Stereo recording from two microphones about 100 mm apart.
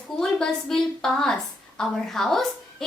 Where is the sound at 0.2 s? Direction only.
5° left (ahead or behind).